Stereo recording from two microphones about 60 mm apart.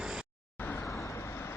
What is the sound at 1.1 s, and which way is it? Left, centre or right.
Vehicle, left.